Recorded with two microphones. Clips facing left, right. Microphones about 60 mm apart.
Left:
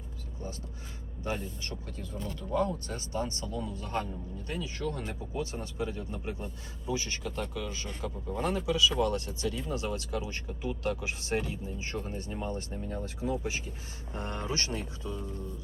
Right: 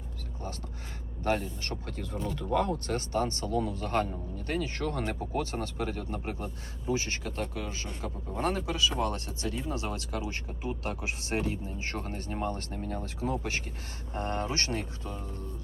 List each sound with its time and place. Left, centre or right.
1.2 s speech: right
2.0 s speech: right
2.8 s speech: right
14.1 s speech: right